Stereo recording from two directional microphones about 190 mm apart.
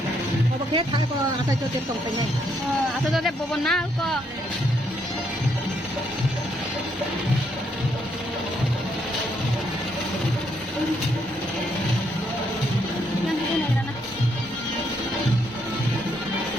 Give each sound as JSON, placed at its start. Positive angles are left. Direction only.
{"t": 0.7, "sound": "speech", "side_deg": -25}
{"t": 3.1, "sound": "speech", "side_deg": 0}